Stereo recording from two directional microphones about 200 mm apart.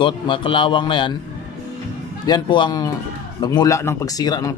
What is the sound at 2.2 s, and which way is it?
Speech, 20° left (ahead or behind).